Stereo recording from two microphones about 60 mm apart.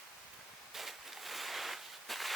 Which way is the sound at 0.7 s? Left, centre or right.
Centre.